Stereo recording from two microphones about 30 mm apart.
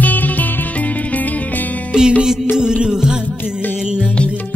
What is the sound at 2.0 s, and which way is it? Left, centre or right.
Music, right.